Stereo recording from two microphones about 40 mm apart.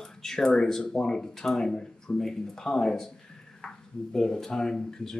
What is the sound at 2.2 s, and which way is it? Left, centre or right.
Speech, centre.